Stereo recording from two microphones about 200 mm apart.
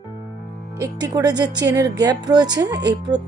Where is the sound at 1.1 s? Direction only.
20° right (ahead or behind).